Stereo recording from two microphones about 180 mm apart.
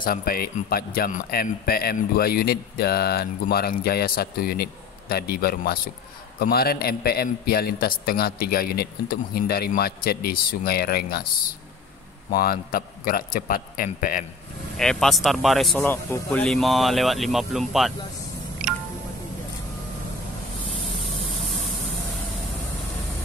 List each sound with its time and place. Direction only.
0.0 s a man's voice: 55° left (ahead or behind)
12.3 s a man's voice: 55° left (ahead or behind)
14.8 s speech: 5° left (ahead or behind)
15.8 s a man's voice: 15° left (ahead or behind)
16.4 s speech: centre (ahead or behind)